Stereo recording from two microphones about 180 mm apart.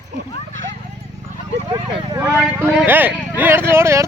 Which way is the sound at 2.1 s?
15° right (ahead or behind).